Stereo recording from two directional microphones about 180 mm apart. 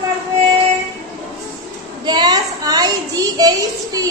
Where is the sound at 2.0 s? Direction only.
25° right (ahead or behind).